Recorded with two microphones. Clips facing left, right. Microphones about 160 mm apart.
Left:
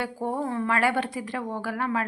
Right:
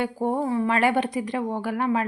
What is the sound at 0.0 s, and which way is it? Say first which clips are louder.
A woman's voice: right 4 dB; 20° right (ahead or behind).